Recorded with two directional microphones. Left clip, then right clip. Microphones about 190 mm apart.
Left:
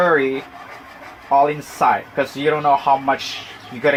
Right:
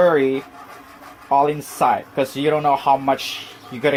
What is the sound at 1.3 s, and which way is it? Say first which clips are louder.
Speech: left 2 dB; 45° right (ahead or behind).